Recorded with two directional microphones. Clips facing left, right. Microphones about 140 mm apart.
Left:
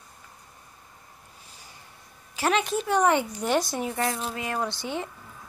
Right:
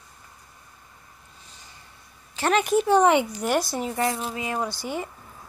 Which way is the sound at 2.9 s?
20° right (ahead or behind).